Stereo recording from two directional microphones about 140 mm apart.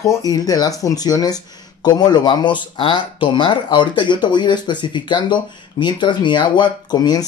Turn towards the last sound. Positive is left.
turn(degrees=30)  # may be behind; listen again after turning